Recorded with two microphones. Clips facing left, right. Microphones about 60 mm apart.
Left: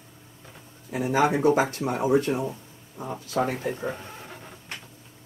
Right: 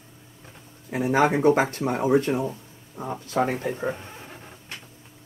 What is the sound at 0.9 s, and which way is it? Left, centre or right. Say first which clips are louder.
Speech: right 2 dB; right.